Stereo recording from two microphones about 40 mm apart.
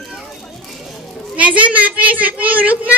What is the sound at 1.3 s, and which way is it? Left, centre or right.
A man's voice, right.